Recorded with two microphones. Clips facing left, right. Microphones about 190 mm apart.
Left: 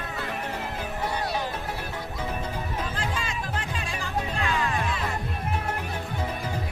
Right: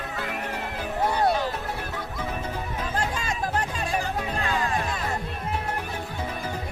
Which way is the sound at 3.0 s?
45° right (ahead or behind).